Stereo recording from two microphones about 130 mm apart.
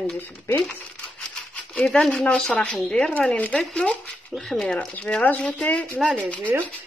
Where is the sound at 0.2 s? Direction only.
15° left (ahead or behind).